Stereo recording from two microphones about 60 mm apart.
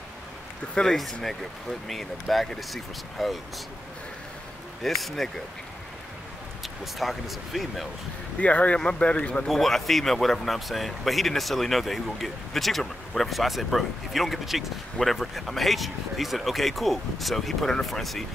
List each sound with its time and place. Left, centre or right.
0.9 s speech: centre
4.8 s speech: centre
6.6 s speech: centre
8.4 s speech: left
9.5 s speech: centre